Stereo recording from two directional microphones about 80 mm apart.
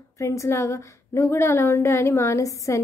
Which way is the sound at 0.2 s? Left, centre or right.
Left.